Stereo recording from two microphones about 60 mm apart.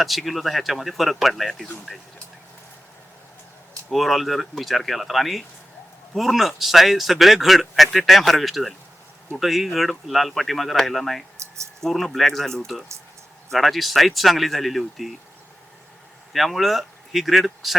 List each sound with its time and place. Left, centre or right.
0.0 s speech: centre
3.8 s speech: centre
11.3 s a sound: right
11.8 s speech: centre
16.3 s speech: centre